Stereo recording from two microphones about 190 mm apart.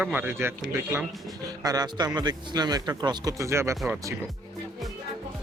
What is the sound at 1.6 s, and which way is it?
Speech, 20° right (ahead or behind).